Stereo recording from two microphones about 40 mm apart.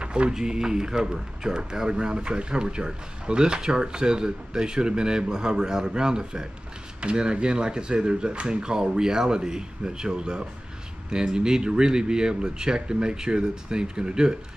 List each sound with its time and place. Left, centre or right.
0.0 s speech: right